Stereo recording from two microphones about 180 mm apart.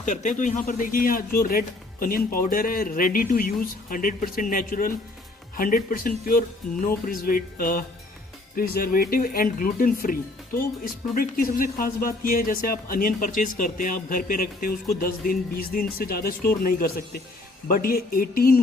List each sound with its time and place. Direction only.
0.0 s speech: 45° left (ahead or behind)
17.7 s speech: 55° left (ahead or behind)